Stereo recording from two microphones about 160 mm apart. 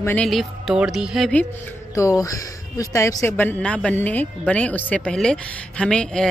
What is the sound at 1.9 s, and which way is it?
A woman's voice, 20° left (ahead or behind).